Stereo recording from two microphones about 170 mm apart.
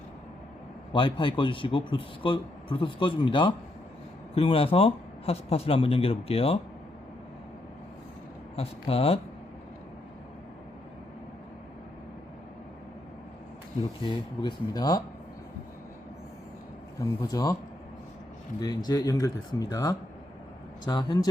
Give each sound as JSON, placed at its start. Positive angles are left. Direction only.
{"t": 0.9, "sound": "a man's voice", "side_deg": 30}
{"t": 8.5, "sound": "speech", "side_deg": 35}
{"t": 14.0, "sound": "a man's voice", "side_deg": 25}
{"t": 17.0, "sound": "a man's voice", "side_deg": 20}
{"t": 18.6, "sound": "a man's voice", "side_deg": 25}